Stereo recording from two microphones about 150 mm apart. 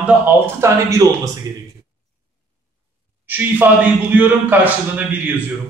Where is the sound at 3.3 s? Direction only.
10° right (ahead or behind).